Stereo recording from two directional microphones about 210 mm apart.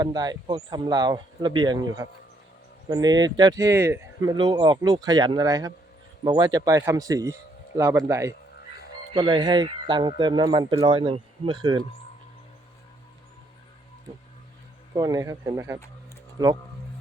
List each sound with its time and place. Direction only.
0.0 s speech: 20° right (ahead or behind)
14.9 s speech: 15° right (ahead or behind)